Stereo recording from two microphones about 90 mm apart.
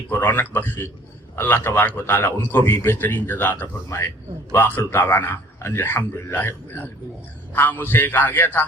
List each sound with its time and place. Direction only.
0.1 s a man's voice: 20° left (ahead or behind)